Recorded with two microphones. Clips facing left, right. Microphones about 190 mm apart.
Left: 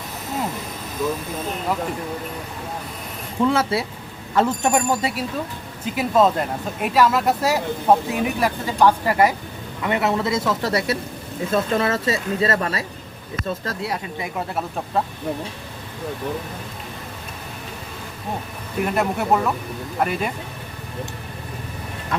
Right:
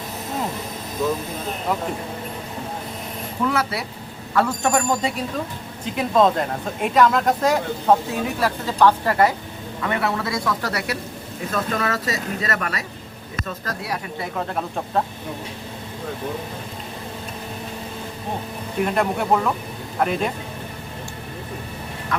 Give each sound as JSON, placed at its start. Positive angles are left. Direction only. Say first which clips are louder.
{"t": 3.4, "sound": "speech", "louder": "left 4 dB", "side_deg": 25}
{"t": 5.8, "sound": "speech", "louder": "even", "side_deg": 5}
{"t": 14.2, "sound": "speech", "louder": "even", "side_deg": 5}
{"t": 18.9, "sound": "speech", "louder": "left 1 dB", "side_deg": 5}